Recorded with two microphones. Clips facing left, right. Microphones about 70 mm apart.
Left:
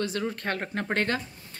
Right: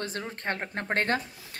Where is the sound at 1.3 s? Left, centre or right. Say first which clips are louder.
Right 2 dB; right.